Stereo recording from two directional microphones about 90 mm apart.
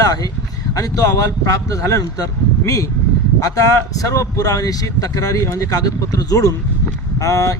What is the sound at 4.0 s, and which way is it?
Speech, 40° left (ahead or behind).